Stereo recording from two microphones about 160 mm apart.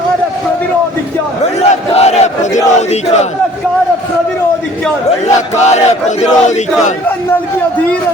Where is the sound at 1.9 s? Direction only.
40° left (ahead or behind).